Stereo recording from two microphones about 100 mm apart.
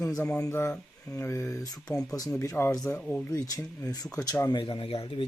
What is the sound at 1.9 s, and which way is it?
Speech, 5° left (ahead or behind).